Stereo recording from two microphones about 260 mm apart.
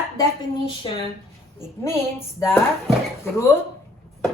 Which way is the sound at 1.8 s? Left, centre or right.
Centre.